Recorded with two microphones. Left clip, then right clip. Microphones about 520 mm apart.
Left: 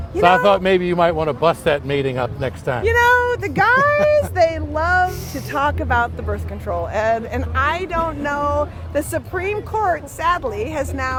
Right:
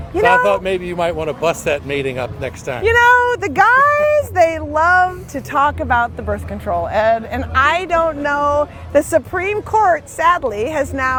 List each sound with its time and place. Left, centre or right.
0.2 s a man's voice: left
2.8 s speech: right